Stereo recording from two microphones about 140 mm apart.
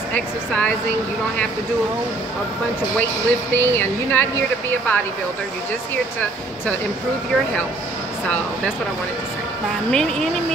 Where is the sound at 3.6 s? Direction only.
15° left (ahead or behind).